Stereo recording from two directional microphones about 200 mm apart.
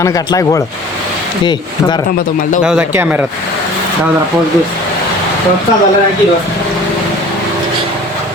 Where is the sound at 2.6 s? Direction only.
5° right (ahead or behind).